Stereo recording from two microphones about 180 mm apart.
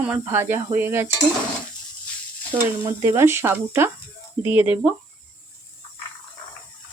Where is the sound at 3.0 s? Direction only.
15° right (ahead or behind).